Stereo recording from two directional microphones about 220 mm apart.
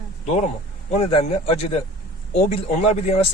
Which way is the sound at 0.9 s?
25° left (ahead or behind).